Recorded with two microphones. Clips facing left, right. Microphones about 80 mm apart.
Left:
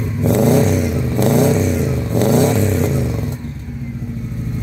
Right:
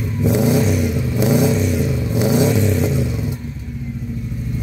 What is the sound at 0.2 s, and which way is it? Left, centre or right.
Vehicle, centre.